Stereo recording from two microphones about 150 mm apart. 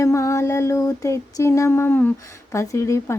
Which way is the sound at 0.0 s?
20° left (ahead or behind).